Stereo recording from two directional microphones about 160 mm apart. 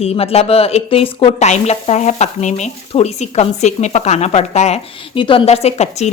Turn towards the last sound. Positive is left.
turn(degrees=45)  # may be behind; listen again after turning